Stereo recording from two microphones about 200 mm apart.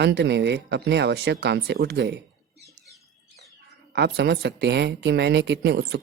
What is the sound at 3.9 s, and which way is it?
Speech, 55° right (ahead or behind).